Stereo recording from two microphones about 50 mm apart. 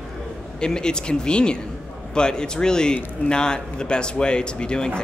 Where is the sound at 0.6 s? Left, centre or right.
Centre.